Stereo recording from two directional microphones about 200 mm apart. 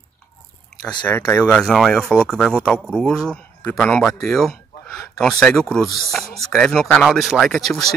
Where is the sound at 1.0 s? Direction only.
10° left (ahead or behind).